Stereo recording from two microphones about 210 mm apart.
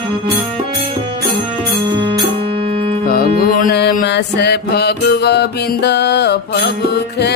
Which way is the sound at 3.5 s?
45° left (ahead or behind).